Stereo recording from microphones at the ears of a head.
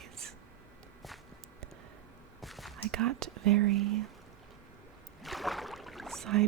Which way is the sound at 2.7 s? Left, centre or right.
Right.